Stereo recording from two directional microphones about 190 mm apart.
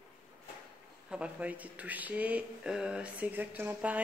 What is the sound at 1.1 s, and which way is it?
Speech, 5° right (ahead or behind).